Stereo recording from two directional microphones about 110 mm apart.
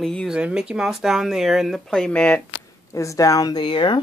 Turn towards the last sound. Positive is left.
turn(degrees=45)  # may be behind; listen again after turning